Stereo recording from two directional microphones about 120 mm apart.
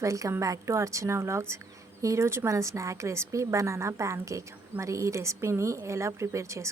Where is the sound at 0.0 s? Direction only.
25° right (ahead or behind).